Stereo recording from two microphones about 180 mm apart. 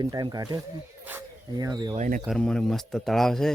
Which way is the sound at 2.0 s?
50° right (ahead or behind).